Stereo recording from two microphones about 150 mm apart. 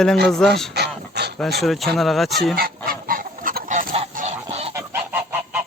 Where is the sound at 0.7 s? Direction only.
90° right.